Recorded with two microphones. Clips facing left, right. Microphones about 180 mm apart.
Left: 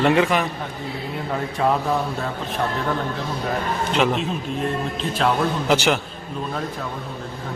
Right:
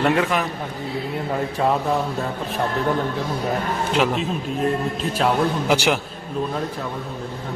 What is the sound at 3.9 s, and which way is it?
A man's voice, centre (ahead or behind).